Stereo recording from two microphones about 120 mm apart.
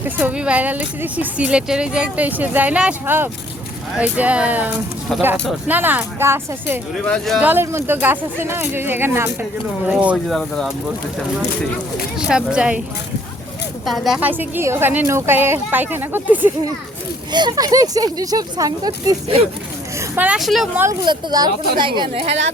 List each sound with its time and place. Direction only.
0.0 s speech: 15° right (ahead or behind)
7.0 s speech: 5° left (ahead or behind)
7.3 s speech: 15° right (ahead or behind)
10.2 s speech: 5° left (ahead or behind)
12.2 s speech: 5° right (ahead or behind)
13.8 s speech: centre (ahead or behind)
14.2 s speech: 15° right (ahead or behind)
17.3 s speech: 35° right (ahead or behind)
20.1 s speech: 10° right (ahead or behind)
20.4 s speech: centre (ahead or behind)
21.0 s speech: 40° right (ahead or behind)
22.1 s a woman's voice: 55° right (ahead or behind)